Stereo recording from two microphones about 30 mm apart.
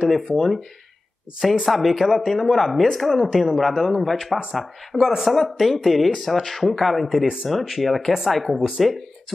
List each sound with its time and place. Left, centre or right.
0.0 s speech: centre
1.7 s speech: centre
8.5 s speech: centre